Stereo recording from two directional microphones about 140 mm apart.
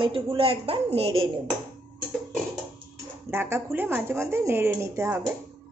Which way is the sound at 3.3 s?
15° right (ahead or behind).